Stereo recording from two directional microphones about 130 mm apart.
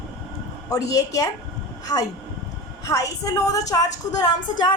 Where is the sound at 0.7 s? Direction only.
25° left (ahead or behind).